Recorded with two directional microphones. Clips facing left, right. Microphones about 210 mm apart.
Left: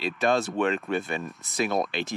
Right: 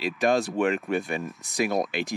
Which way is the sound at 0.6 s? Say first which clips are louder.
Right 1 dB; 15° right (ahead or behind).